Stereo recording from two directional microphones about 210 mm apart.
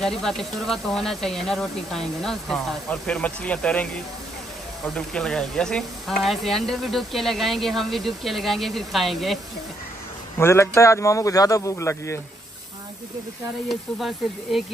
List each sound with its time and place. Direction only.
0.0 s speech: centre (ahead or behind)
10.4 s speech: 10° left (ahead or behind)
13.7 s speech: centre (ahead or behind)